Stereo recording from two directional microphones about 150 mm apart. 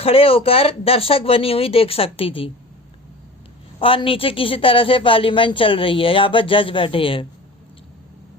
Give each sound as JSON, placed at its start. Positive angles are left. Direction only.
{"t": 0.0, "sound": "speech", "side_deg": 40}
{"t": 3.8, "sound": "speech", "side_deg": 35}